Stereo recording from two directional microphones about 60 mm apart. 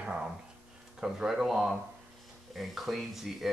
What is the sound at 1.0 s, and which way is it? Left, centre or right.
Speech, centre.